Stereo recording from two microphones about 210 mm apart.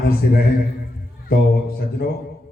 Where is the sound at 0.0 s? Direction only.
45° left (ahead or behind).